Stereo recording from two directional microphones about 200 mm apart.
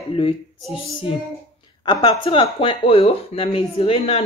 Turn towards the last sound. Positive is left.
turn(degrees=30)  # may be behind; listen again after turning